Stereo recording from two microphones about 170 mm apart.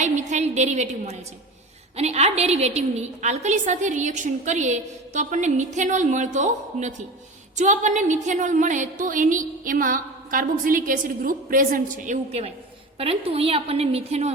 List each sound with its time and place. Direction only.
0.0 s a woman's voice: 45° right (ahead or behind)